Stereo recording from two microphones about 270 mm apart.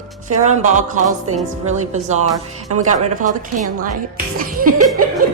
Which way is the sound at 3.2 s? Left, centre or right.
Right.